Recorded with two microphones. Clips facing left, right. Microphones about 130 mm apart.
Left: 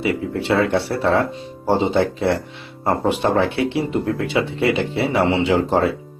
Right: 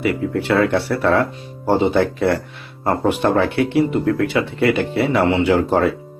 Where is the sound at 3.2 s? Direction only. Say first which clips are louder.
Right 1 dB; 15° left (ahead or behind).